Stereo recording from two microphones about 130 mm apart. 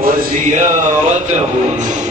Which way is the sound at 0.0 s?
80° right.